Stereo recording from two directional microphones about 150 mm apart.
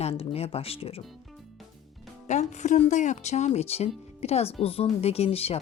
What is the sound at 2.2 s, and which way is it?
Speech, 50° left (ahead or behind).